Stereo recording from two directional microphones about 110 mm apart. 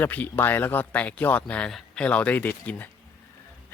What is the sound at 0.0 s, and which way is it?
Speech, 15° left (ahead or behind).